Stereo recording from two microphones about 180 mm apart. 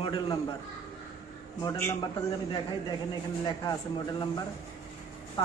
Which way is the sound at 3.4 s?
20° left (ahead or behind).